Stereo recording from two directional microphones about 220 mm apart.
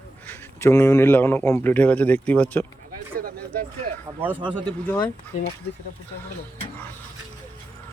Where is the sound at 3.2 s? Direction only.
40° right (ahead or behind).